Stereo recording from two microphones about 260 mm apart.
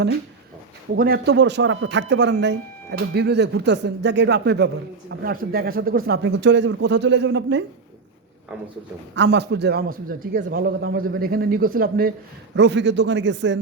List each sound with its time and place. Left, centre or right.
0.9 s a man's voice: right
9.1 s a man's voice: right